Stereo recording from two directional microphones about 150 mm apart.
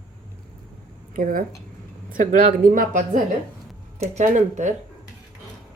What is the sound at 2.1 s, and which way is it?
Speech, 60° right (ahead or behind).